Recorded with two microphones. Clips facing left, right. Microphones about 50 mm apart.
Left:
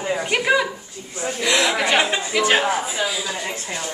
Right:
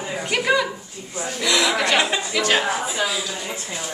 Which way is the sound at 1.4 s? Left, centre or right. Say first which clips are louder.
Left 1 dB; left.